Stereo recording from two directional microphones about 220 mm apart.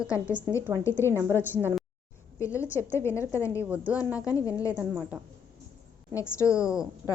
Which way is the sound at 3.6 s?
5° right (ahead or behind).